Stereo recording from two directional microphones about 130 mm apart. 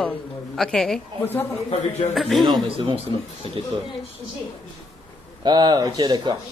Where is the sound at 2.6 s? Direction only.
45° right (ahead or behind).